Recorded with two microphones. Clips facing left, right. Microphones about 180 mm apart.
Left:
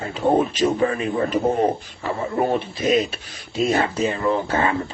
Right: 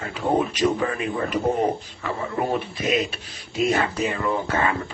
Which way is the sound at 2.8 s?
35° left (ahead or behind).